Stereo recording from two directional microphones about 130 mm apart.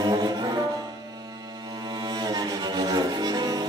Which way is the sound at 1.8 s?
35° right (ahead or behind).